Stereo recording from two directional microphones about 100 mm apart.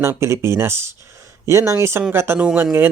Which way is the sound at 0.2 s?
25° right (ahead or behind).